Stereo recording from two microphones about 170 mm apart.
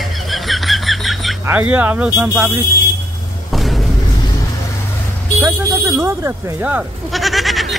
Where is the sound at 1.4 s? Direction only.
10° right (ahead or behind).